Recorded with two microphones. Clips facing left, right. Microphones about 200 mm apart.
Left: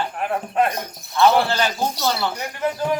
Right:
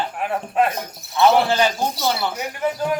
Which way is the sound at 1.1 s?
15° right (ahead or behind).